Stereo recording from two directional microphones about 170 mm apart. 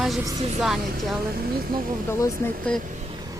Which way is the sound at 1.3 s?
60° right (ahead or behind).